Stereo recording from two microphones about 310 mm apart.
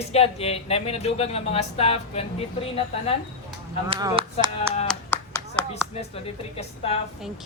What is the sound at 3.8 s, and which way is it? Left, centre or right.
Speech, centre.